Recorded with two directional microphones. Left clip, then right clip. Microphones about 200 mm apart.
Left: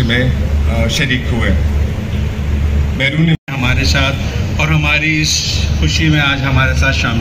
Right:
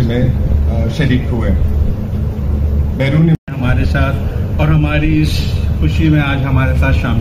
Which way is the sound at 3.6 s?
35° right (ahead or behind).